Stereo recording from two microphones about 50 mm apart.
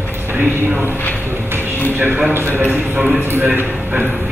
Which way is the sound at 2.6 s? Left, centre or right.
Right.